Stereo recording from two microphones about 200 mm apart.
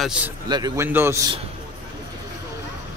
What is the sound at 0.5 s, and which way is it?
Speech, 15° right (ahead or behind).